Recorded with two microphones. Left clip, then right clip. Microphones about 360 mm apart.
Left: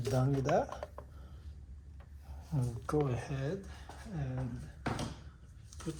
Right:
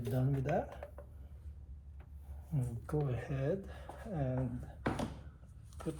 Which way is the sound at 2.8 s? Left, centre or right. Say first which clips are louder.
Left 6 dB; centre.